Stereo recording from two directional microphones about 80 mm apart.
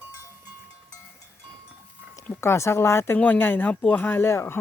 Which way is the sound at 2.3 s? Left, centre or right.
Left.